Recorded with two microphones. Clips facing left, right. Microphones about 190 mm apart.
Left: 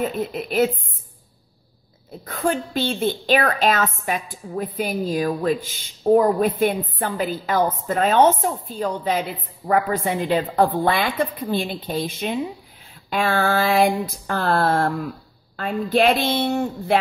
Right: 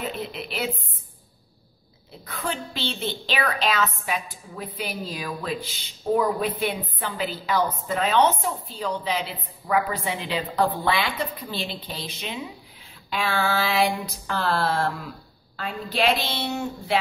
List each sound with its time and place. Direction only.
0.1 s a woman's voice: 45° left (ahead or behind)
2.2 s a woman's voice: 45° left (ahead or behind)